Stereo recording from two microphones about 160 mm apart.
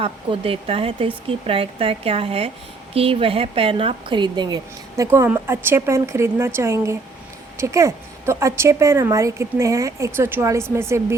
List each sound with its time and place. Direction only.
0.0 s a woman's voice: 35° right (ahead or behind); by 11.0 s 15° right (ahead or behind)